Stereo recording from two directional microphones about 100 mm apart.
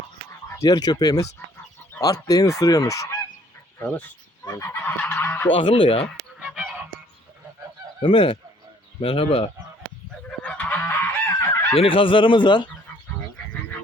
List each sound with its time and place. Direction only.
0.4 s speech: 30° left (ahead or behind)
2.0 s goose: 35° left (ahead or behind)
4.6 s goose: 20° left (ahead or behind)
5.5 s fowl: 60° left (ahead or behind)
6.4 s goose: 5° right (ahead or behind)
8.0 s fowl: 60° left (ahead or behind)
9.0 s speech: 65° left (ahead or behind)
10.4 s goose: 15° left (ahead or behind)
11.7 s fowl: 65° left (ahead or behind)